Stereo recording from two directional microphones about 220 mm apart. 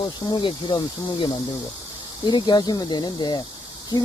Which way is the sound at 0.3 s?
20° left (ahead or behind).